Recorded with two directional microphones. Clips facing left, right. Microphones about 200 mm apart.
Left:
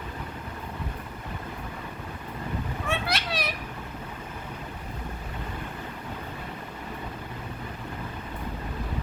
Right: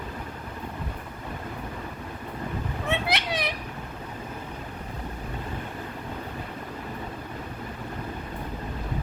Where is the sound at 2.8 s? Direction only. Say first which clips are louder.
Right 3 dB; 20° right (ahead or behind).